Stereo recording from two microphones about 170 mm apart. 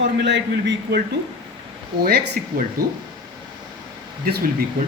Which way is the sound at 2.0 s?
65° right (ahead or behind).